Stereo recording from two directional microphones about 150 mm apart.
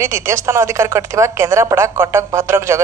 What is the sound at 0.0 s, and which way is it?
A woman's voice, 20° right (ahead or behind).